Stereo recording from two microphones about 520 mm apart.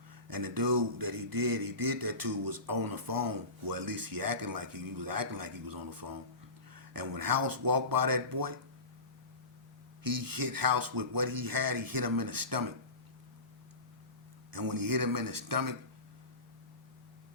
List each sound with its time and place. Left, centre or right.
0.3 s speech: right
10.0 s speech: right
14.5 s speech: right